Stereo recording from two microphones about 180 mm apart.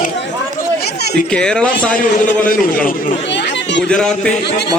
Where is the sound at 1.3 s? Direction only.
5° left (ahead or behind).